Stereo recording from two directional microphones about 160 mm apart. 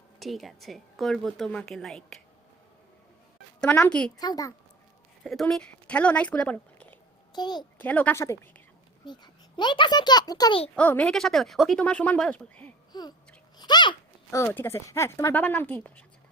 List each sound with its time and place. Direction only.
0.2 s a woman's voice: centre (ahead or behind)
3.6 s speech: 5° left (ahead or behind)
4.2 s a child's voice: 25° left (ahead or behind)
5.2 s speech: centre (ahead or behind)
7.3 s a child's voice: 25° left (ahead or behind)
7.8 s a woman's voice: 10° left (ahead or behind)
9.0 s a child's voice: 25° left (ahead or behind)
10.8 s speech: 10° left (ahead or behind)
12.9 s babbling: 25° left (ahead or behind)
13.6 s a sound: 25° left (ahead or behind)
14.3 s speech: 15° left (ahead or behind)